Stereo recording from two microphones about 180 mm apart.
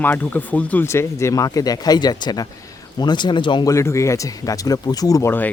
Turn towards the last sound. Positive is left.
turn(degrees=15)  # may be behind; listen again after turning